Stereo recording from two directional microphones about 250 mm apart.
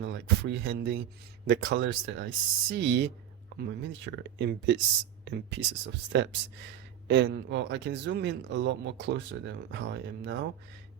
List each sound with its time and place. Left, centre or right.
0.0 s speech: right